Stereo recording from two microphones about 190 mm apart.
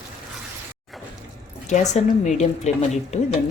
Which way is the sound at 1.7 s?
40° left (ahead or behind).